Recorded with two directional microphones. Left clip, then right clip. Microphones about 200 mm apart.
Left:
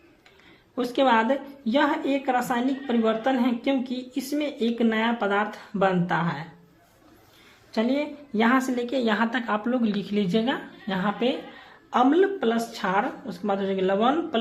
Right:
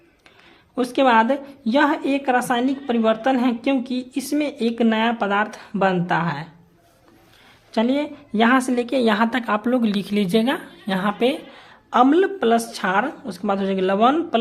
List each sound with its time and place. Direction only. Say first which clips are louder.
0.8 s a woman's voice: right 5 dB; 40° right (ahead or behind)
7.7 s a woman's voice: right 4 dB; 40° right (ahead or behind)